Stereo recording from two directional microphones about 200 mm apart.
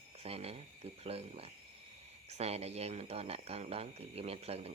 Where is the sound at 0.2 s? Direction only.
30° right (ahead or behind).